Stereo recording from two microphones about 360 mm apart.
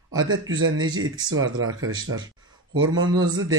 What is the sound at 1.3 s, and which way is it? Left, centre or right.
Speech, right.